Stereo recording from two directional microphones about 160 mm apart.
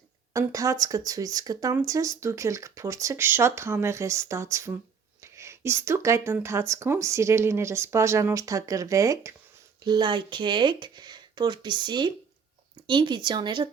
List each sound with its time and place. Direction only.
0.3 s speech: 20° right (ahead or behind)